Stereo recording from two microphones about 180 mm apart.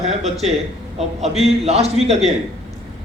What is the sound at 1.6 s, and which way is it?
Speech, 35° right (ahead or behind).